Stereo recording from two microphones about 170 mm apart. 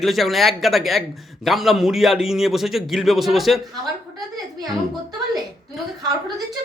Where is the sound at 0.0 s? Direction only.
Centre (ahead or behind).